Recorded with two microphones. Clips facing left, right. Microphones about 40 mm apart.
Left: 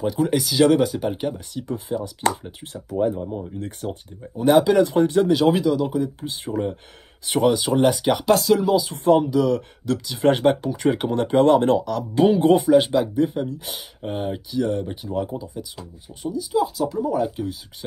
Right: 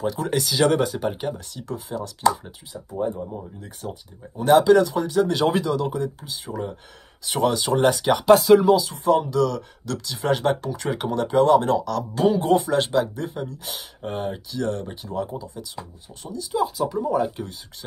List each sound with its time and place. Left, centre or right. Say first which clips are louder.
0.0 s speech: left 3 dB; centre
1.5 s speech: left 4 dB; centre
2.9 s speech: left 4 dB; left
3.5 s speech: left 5 dB; left
4.4 s speech: even; centre
4.8 s speech: left 3 dB; left
5.3 s speech: left 3 dB; centre
6.2 s speech: left 5 dB; left
7.4 s speech: left 1 dB; centre
9.2 s speech: left 1 dB; centre
9.9 s speech: left 5 dB; left
11.9 s speech: left 3 dB; centre
12.5 s speech: left 4 dB; centre